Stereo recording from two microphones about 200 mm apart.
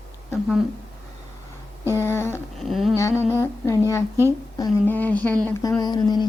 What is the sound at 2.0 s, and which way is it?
Speech, 10° left (ahead or behind).